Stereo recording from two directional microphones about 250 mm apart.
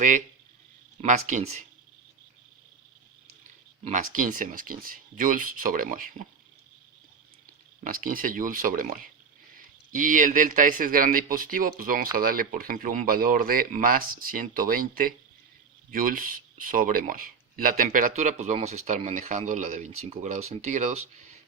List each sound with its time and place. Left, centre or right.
1.0 s speech: right
3.8 s speech: right
7.9 s speech: right